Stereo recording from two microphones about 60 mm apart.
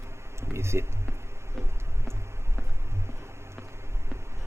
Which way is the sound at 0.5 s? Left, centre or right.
Right.